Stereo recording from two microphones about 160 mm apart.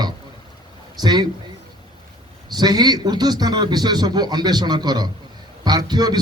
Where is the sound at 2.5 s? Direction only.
25° right (ahead or behind).